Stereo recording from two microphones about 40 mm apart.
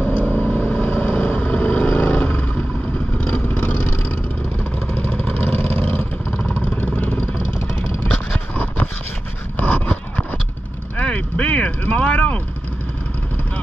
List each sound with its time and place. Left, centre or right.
0.1 s vehicle: left
5.3 s vehicle: left
9.6 s a sound: left
11.0 s vehicle: left